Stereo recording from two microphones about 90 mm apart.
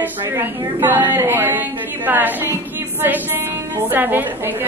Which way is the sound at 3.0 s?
25° right (ahead or behind).